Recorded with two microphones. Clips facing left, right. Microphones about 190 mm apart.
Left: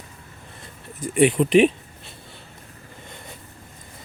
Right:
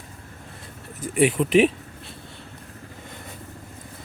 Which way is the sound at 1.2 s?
Centre (ahead or behind).